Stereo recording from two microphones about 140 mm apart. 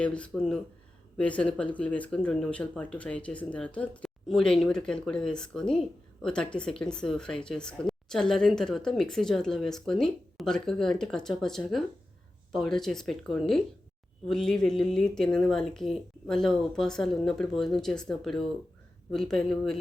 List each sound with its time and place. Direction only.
0.0 s speech: 5° left (ahead or behind)